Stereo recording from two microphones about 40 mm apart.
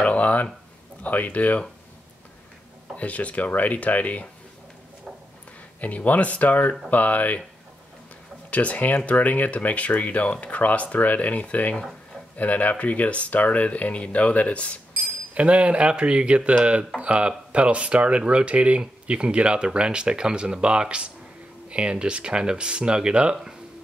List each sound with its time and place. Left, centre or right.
0.0 s a sound: left
1.0 s speech: left
3.0 s speech: left
5.8 s speech: left
8.5 s speech: left
15.3 s speech: right